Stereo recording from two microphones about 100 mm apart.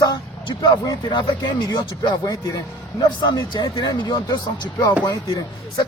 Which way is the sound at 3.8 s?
45° left (ahead or behind).